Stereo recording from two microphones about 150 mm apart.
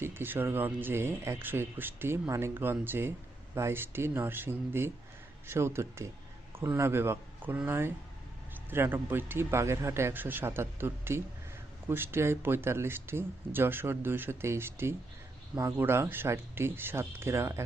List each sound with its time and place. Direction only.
0.0 s speech: 15° right (ahead or behind)